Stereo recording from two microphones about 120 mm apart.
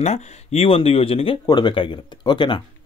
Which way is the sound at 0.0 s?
65° left (ahead or behind).